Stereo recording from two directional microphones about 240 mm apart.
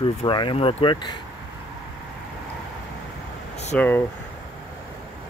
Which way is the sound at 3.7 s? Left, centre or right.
Centre.